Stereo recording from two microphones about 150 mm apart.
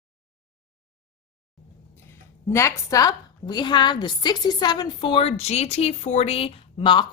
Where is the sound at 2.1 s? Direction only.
20° left (ahead or behind).